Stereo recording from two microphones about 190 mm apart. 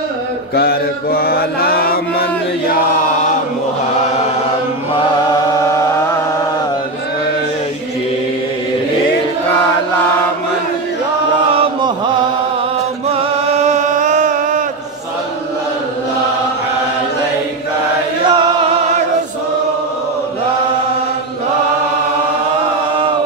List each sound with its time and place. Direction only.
0.6 s mantra: 55° left (ahead or behind)
11.5 s chant: 30° right (ahead or behind)
13.7 s music: 40° right (ahead or behind)
18.2 s chant: 25° right (ahead or behind)